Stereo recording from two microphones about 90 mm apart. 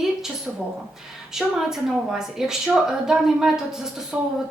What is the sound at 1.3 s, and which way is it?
A woman's voice, 5° right (ahead or behind).